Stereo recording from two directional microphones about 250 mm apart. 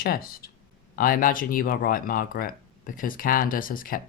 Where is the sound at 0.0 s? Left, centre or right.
Left.